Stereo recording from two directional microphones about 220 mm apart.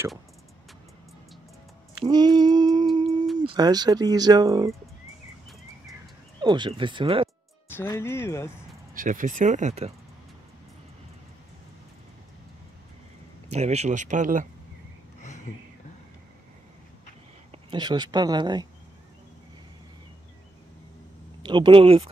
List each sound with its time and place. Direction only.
2.0 s a sound: 20° right (ahead or behind)
3.5 s speech: 20° right (ahead or behind)
6.4 s speech: 20° right (ahead or behind)
7.7 s speech: 10° left (ahead or behind)
8.9 s speech: 35° right (ahead or behind)
13.5 s speech: 30° right (ahead or behind)
17.5 s speech: 20° right (ahead or behind)
21.4 s speech: 20° right (ahead or behind)